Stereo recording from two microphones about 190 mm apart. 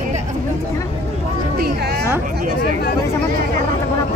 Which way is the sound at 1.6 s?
60° right (ahead or behind).